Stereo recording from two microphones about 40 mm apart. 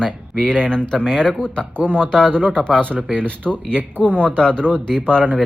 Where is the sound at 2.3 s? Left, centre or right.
Right.